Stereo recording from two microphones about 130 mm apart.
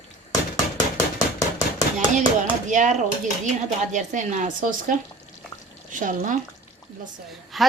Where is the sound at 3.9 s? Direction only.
70° right (ahead or behind).